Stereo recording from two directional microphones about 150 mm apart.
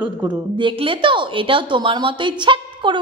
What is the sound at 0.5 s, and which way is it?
A woman's voice, 35° right (ahead or behind).